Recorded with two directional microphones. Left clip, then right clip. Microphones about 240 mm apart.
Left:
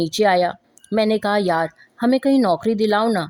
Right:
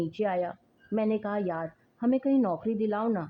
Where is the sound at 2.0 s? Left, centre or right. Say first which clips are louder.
Left 9 dB; left.